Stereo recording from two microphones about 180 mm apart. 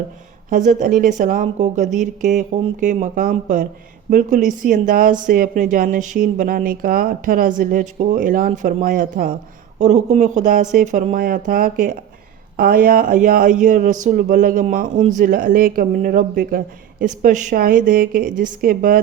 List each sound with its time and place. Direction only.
0.5 s speech: 45° right (ahead or behind)
9.7 s speech: 40° right (ahead or behind)